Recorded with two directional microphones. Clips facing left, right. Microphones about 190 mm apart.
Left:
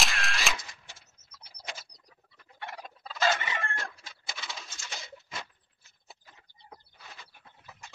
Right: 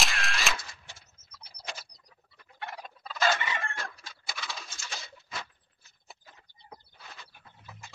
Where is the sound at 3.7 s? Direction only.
20° left (ahead or behind).